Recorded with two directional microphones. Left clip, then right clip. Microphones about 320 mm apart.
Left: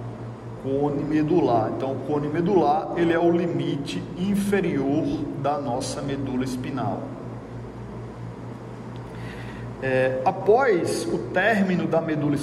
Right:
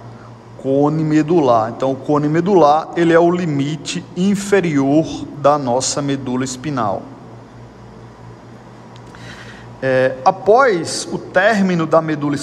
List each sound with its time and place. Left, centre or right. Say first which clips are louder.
1.1 s a man's voice: right 7 dB; centre
9.8 s a man's voice: right 7 dB; centre